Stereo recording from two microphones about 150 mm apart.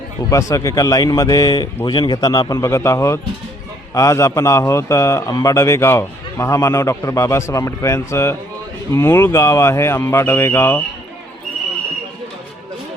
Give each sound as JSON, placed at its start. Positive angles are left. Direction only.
{"t": 0.3, "sound": "speech", "side_deg": 20}